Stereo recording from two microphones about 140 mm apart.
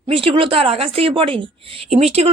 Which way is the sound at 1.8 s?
50° right (ahead or behind).